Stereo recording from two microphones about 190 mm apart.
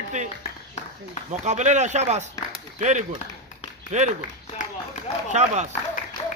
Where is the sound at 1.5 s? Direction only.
40° right (ahead or behind).